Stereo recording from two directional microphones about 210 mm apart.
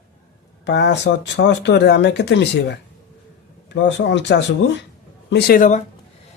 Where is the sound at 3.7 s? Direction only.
55° left (ahead or behind).